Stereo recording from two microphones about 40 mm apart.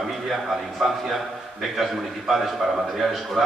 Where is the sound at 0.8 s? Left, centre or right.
Centre.